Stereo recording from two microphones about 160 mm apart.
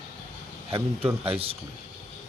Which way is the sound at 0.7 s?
35° right (ahead or behind).